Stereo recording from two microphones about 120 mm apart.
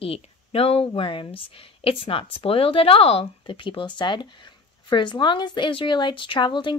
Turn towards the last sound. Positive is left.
turn(degrees=40)  # may be behind; listen again after turning